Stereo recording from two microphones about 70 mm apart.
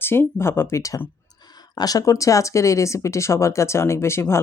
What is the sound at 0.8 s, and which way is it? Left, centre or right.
Speech, left.